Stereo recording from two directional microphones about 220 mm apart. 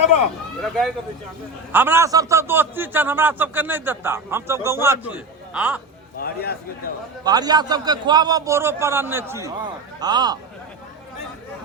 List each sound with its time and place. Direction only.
0.6 s speech: centre (ahead or behind)
1.7 s a man's voice: 10° right (ahead or behind)
6.1 s a man's voice: 45° left (ahead or behind)
7.3 s a man's voice: 20° right (ahead or behind)